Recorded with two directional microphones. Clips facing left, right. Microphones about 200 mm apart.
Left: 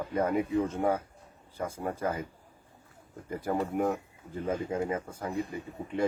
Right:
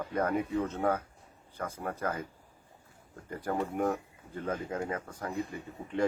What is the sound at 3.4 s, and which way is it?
Speech, 5° left (ahead or behind).